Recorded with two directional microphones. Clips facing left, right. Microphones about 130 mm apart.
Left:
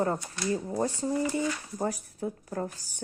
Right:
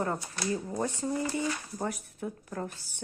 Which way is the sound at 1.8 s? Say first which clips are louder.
Left 3 dB; 30° left (ahead or behind).